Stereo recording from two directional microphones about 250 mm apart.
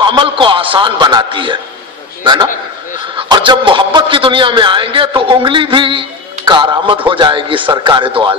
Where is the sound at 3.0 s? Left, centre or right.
Centre.